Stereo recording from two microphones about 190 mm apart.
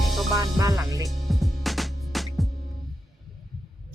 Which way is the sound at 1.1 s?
Centre (ahead or behind).